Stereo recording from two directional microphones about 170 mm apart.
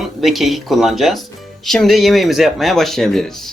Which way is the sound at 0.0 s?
Centre (ahead or behind).